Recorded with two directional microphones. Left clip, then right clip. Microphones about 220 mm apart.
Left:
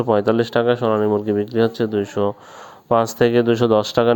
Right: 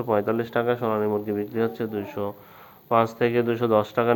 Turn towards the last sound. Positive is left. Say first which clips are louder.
# left 5 dB
turn(degrees=50)  # may be behind; listen again after turning